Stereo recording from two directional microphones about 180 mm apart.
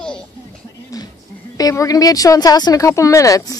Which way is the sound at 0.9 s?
20° left (ahead or behind).